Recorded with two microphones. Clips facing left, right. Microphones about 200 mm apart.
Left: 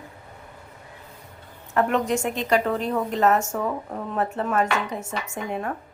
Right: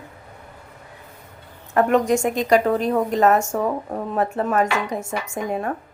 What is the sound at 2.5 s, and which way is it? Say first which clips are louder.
Speech: right 4 dB; 40° right (ahead or behind).